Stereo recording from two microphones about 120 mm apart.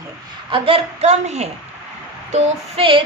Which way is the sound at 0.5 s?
50° right (ahead or behind).